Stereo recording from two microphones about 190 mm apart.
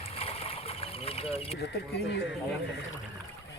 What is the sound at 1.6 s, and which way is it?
Speech, 60° left (ahead or behind).